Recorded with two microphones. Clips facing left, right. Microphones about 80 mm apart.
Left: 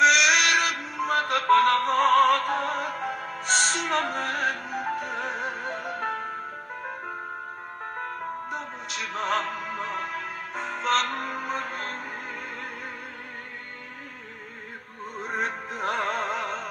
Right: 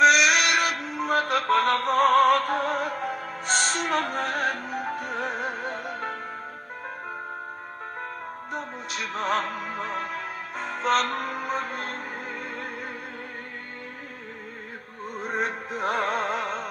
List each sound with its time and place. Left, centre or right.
0.0 s synthetic singing: right
0.4 s music: right
0.8 s music: centre
2.2 s opera: centre
2.6 s music: centre
9.0 s music: centre
15.1 s music: centre